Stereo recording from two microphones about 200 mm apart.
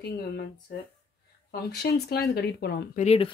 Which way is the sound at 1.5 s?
50° left (ahead or behind).